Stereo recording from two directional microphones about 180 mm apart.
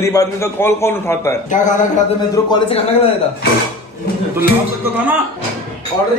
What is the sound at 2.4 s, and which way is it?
Speech, 20° left (ahead or behind).